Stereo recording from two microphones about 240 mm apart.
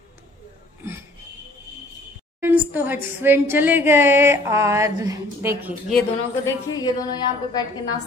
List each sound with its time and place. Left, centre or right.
2.4 s a woman's voice: centre
5.9 s a woman's voice: centre